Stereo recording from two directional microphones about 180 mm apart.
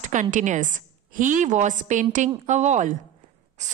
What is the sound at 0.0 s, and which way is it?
A woman's voice, 45° right (ahead or behind).